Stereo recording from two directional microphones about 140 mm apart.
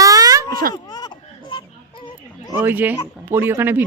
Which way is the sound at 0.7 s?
30° left (ahead or behind).